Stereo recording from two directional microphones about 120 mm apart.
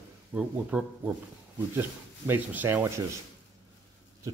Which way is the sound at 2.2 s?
15° right (ahead or behind).